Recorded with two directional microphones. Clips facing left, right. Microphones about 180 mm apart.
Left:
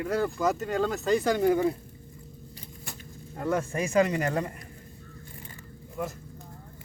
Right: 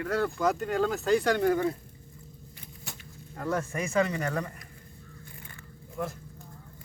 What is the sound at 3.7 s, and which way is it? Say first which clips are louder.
Speech: left 4 dB; 30° left (ahead or behind).